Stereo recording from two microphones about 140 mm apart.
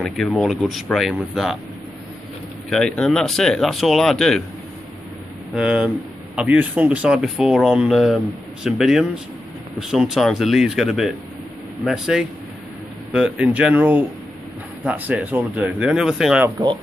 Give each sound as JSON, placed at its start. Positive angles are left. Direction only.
{"t": 0.0, "sound": "speech", "side_deg": 5}
{"t": 2.7, "sound": "speech", "side_deg": 5}
{"t": 5.5, "sound": "speech", "side_deg": -5}
{"t": 16.4, "sound": "speech", "side_deg": -20}